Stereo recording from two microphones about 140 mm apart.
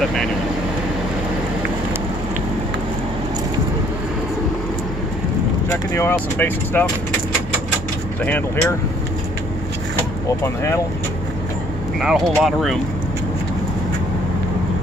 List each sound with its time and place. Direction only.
5.7 s speech: 15° left (ahead or behind)
10.2 s speech: 20° left (ahead or behind)
12.0 s speech: 5° right (ahead or behind)